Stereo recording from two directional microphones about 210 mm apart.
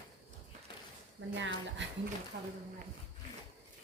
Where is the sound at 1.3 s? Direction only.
60° right (ahead or behind).